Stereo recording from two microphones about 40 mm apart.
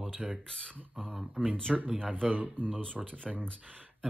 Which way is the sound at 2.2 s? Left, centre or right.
Right.